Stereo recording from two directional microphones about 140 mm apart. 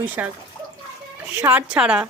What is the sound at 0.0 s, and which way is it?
Speech, 10° right (ahead or behind).